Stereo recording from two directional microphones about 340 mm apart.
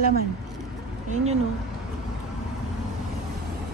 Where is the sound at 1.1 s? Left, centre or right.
Centre.